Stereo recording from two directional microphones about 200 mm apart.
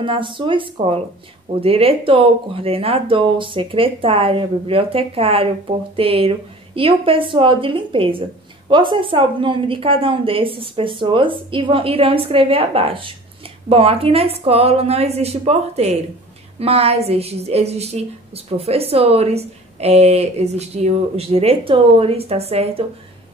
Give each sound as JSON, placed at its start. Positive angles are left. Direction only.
{"t": 0.0, "sound": "a woman's voice", "side_deg": -25}